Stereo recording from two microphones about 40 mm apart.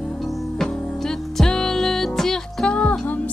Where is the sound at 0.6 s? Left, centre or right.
Centre.